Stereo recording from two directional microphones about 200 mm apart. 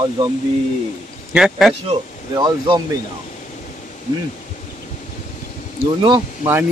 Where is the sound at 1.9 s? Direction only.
20° right (ahead or behind).